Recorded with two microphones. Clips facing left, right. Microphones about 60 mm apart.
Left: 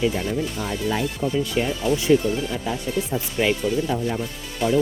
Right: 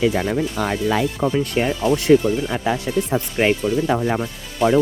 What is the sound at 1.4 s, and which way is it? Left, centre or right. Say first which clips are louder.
Speech: right 3 dB; right.